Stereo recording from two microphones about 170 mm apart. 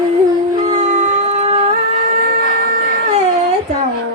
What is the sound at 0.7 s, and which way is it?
Howl, 45° right (ahead or behind).